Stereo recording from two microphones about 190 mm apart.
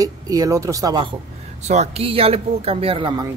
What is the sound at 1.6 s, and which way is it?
Speech, 35° right (ahead or behind).